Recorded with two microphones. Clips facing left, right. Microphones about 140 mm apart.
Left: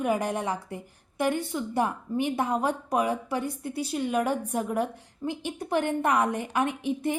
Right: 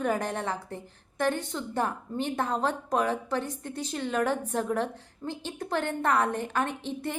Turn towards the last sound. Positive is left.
turn(degrees=10)  # may be behind; listen again after turning